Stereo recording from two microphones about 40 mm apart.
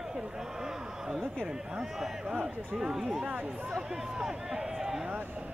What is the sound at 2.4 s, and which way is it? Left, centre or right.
Speech, centre.